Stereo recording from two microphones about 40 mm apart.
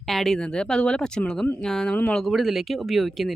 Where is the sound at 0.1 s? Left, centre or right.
Centre.